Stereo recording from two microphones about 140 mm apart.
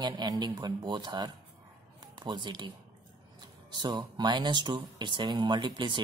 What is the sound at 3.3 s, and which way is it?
Speech, 30° right (ahead or behind).